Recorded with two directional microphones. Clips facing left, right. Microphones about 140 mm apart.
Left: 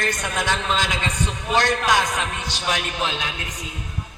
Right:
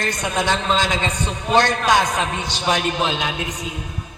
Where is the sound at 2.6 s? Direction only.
25° right (ahead or behind).